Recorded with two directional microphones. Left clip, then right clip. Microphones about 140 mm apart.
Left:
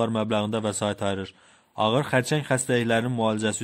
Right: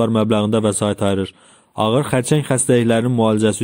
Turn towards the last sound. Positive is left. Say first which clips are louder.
# right 9 dB
turn(degrees=-35)  # may be behind; listen again after turning